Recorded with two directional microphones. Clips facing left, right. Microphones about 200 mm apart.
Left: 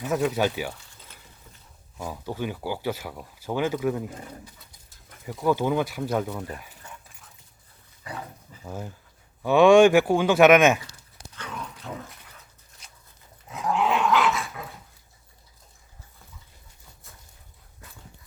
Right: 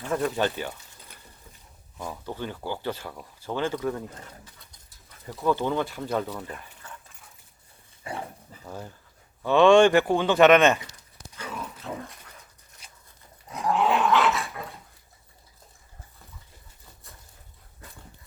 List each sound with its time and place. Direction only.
0.0 s speech: 5° left (ahead or behind)
2.0 s speech: 10° left (ahead or behind)
6.6 s a sound: 10° left (ahead or behind)
8.1 s speech: 25° right (ahead or behind)
8.6 s speech: 5° left (ahead or behind)
11.3 s dog: 10° right (ahead or behind)
13.5 s dog: centre (ahead or behind)